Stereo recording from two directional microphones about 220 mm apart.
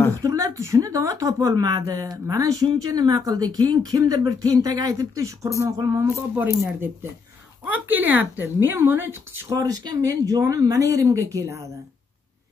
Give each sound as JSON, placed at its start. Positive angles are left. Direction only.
{"t": 0.2, "sound": "a woman's voice", "side_deg": -15}